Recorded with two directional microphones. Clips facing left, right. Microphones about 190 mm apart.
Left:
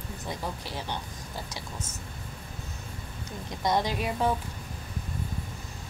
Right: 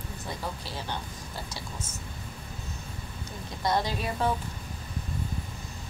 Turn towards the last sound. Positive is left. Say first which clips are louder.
# left 1 dB
turn(degrees=15)  # may be behind; listen again after turning